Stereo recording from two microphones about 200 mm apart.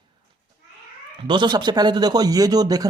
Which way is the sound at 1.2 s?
25° right (ahead or behind).